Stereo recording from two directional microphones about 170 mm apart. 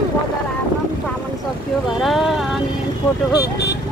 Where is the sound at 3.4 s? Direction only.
75° left (ahead or behind).